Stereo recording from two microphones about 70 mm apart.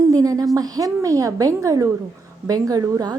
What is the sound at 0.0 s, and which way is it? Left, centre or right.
A woman's voice, right.